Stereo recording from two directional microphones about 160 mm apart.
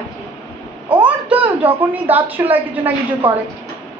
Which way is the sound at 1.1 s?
10° right (ahead or behind).